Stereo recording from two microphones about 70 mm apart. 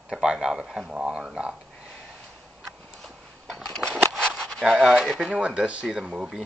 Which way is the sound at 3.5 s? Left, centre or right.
Centre.